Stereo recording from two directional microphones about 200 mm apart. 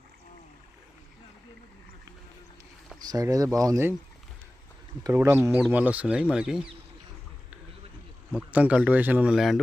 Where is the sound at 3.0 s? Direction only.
20° right (ahead or behind).